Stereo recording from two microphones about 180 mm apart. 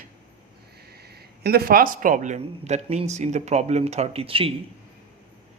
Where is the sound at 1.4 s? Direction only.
60° right (ahead or behind); by 4.5 s 30° right (ahead or behind).